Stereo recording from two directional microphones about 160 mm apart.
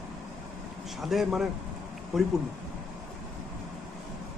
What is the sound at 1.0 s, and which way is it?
A man's voice, centre (ahead or behind).